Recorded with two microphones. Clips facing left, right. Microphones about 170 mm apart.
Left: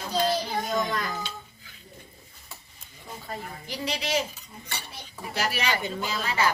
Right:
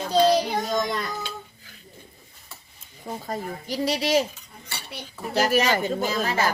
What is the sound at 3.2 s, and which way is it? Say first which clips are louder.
Speech: right 4 dB; 40° right (ahead or behind).